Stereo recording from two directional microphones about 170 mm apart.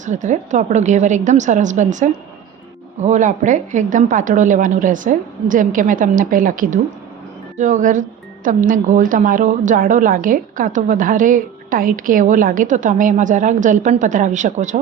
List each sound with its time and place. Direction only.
0.0 s a woman's voice: 45° right (ahead or behind)